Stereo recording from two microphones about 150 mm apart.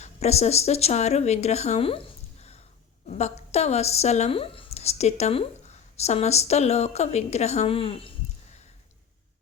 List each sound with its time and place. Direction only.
0.0 s speech: 45° left (ahead or behind)